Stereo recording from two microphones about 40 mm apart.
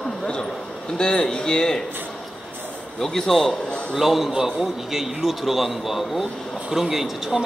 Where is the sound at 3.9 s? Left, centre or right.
Centre.